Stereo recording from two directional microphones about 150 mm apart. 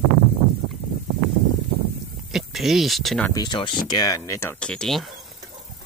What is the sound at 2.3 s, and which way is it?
Speech, centre (ahead or behind).